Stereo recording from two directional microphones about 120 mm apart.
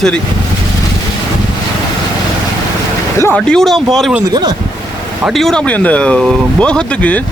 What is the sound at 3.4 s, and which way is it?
Speech, 5° left (ahead or behind).